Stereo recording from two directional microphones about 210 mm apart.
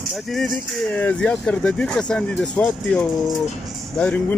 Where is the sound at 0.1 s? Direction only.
Centre (ahead or behind).